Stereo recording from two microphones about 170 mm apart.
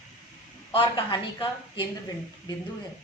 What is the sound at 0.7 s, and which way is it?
A woman's voice, 30° left (ahead or behind).